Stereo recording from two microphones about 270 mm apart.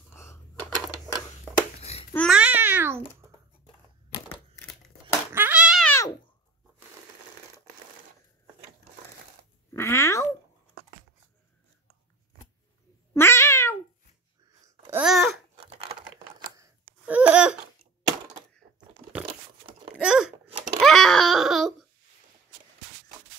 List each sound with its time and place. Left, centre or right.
0.1 s a sound: centre
1.8 s babbling: left
2.1 s babbling: centre
5.0 s cat: centre
9.8 s cat: centre
13.1 s cat: centre
14.8 s babbling: centre
16.5 s a sound: centre
20.0 s a sound: centre
20.8 s wail: centre